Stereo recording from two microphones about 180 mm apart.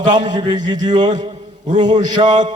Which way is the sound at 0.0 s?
45° right (ahead or behind).